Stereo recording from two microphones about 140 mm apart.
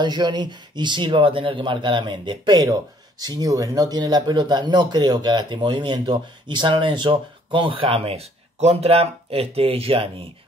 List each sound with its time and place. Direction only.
0.0 s speech: 30° right (ahead or behind)